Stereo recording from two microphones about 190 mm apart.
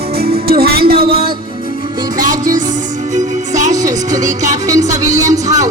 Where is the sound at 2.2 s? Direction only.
45° right (ahead or behind).